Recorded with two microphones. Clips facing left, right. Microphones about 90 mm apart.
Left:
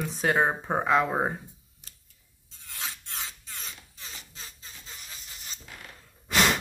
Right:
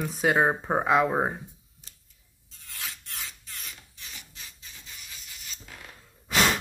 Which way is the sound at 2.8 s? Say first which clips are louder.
Left 2 dB; 25° left (ahead or behind).